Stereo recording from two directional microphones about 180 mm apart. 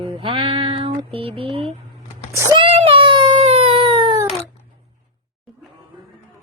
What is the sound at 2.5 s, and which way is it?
Baby cry, 30° right (ahead or behind).